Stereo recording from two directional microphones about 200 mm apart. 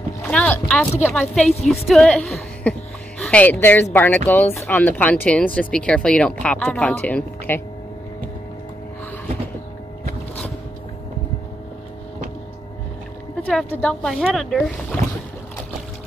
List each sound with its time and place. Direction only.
0.2 s boat: 5° left (ahead or behind)
1.0 s a woman's voice: 10° left (ahead or behind)
13.4 s speech: 5° left (ahead or behind)